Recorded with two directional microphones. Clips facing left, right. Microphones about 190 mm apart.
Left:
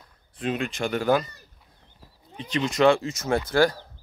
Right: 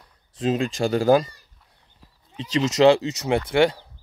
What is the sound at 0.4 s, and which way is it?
Speech, 30° right (ahead or behind).